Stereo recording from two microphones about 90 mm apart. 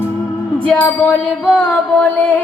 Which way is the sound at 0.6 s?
15° left (ahead or behind).